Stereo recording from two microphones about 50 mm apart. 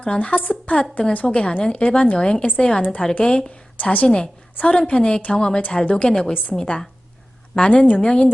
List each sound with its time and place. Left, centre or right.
0.0 s a woman's voice: left
1.3 s a woman's voice: centre
6.3 s a woman's voice: left
6.6 s a woman's voice: centre